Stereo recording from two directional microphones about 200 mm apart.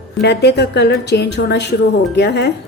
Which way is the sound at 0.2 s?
55° left (ahead or behind).